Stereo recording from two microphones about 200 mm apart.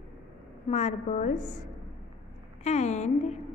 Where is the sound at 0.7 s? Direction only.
35° left (ahead or behind).